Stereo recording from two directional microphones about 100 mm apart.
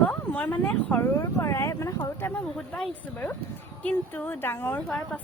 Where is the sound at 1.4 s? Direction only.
30° left (ahead or behind).